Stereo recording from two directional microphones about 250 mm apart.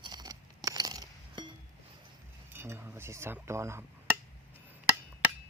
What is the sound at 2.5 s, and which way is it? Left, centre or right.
Cutlery, centre.